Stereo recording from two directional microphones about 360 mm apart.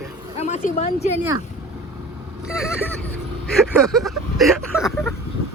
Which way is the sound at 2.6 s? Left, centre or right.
Centre.